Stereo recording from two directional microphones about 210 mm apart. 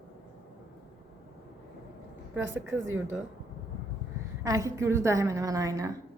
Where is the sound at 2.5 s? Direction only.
10° right (ahead or behind).